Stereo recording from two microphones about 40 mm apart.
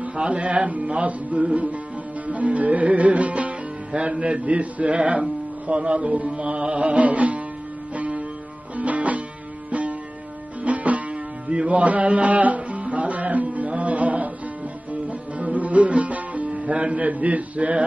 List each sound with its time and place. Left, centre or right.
0.1 s music: right
3.9 s speech: right
5.7 s music: right
16.4 s speech: right